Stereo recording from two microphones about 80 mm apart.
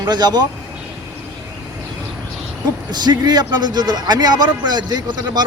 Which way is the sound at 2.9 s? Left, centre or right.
Right.